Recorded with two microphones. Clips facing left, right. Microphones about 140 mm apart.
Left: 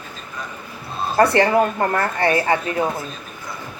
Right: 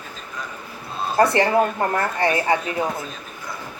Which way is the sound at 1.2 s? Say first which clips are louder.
Left 2 dB; 20° right (ahead or behind).